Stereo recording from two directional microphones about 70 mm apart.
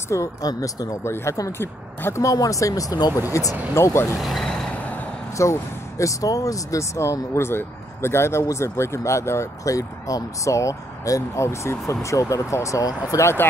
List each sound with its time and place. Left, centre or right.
0.1 s speech: left
1.0 s speech: left
2.2 s speech: left
3.1 s speech: right
3.7 s speech: left
4.2 s speech: centre
4.5 s vehicle: centre
5.4 s speech: left